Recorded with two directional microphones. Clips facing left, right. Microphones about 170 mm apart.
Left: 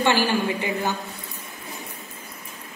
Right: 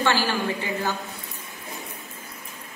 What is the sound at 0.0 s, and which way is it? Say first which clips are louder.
Speech: left 3 dB; 15° left (ahead or behind).